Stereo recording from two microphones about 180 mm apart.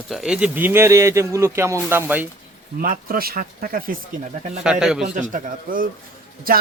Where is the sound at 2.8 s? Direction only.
50° right (ahead or behind).